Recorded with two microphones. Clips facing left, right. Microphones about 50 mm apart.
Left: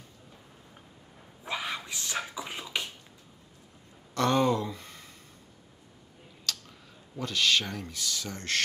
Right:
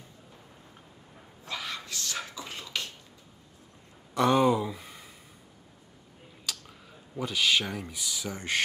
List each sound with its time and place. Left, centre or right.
1.4 s a sound: left
4.1 s speech: centre
6.4 s speech: centre